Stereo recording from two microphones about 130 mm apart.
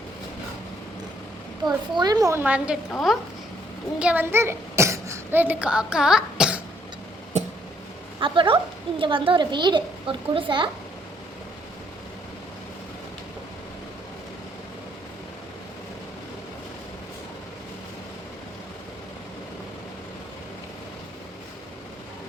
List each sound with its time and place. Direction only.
1.6 s a woman's voice: 30° right (ahead or behind)
2.3 s a woman's voice: 10° right (ahead or behind)
4.0 s a child's voice: 15° right (ahead or behind)
7.3 s a sound: 65° right (ahead or behind)
8.2 s a woman's voice: 40° right (ahead or behind)